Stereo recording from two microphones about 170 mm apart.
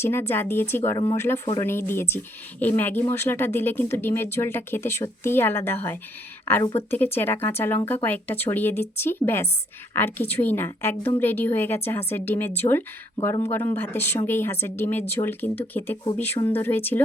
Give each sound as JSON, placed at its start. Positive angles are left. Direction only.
{"t": 0.0, "sound": "speech", "side_deg": 15}